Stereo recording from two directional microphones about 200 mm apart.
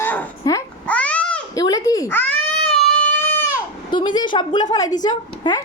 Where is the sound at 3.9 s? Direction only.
25° left (ahead or behind).